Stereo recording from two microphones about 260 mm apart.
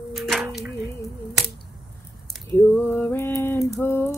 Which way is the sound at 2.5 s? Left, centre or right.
Centre.